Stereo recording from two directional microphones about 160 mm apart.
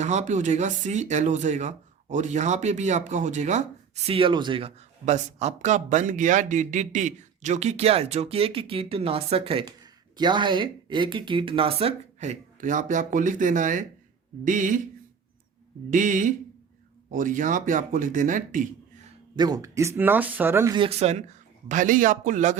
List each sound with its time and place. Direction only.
0.0 s speech: 45° right (ahead or behind)
4.1 s speech: 30° right (ahead or behind)
5.0 s speech: 45° right (ahead or behind)
15.9 s speech: 55° right (ahead or behind)
19.4 s speech: 25° right (ahead or behind)
20.7 s speech: 35° right (ahead or behind)
21.7 s speech: 55° right (ahead or behind)